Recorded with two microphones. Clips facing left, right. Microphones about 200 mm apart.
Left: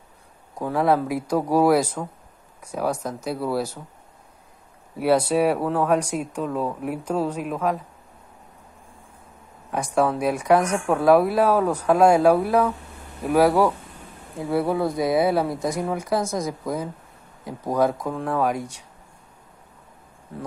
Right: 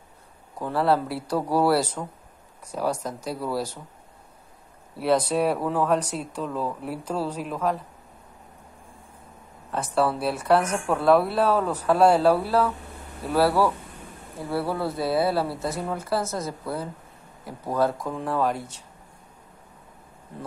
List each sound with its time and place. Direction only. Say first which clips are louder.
0.6 s speech: left 2 dB; 10° left (ahead or behind)
4.9 s speech: left 3 dB; 10° left (ahead or behind)
9.7 s speech: left 2 dB; 10° left (ahead or behind)